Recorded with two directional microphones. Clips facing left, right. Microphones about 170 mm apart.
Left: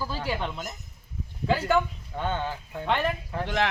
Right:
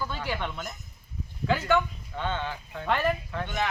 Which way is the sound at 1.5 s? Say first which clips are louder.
Left 1 dB; 35° left (ahead or behind).